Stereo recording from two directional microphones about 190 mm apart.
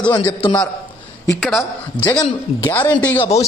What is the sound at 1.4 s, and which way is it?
A man's voice, centre (ahead or behind).